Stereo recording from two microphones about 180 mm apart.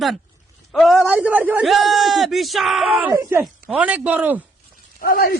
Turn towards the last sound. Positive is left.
turn(degrees=55)  # may be behind; listen again after turning